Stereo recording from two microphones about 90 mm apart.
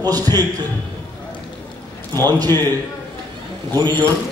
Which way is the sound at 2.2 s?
50° right (ahead or behind).